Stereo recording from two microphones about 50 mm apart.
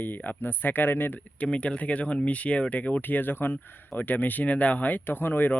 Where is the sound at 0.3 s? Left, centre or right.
Left.